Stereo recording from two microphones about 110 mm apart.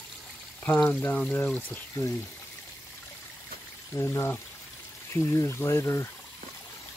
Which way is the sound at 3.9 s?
25° left (ahead or behind).